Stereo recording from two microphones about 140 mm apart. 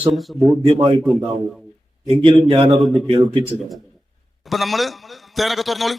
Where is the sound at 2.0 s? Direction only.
35° right (ahead or behind).